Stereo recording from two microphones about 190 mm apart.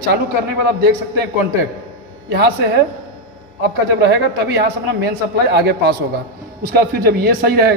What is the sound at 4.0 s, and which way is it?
A man's voice, 65° right (ahead or behind).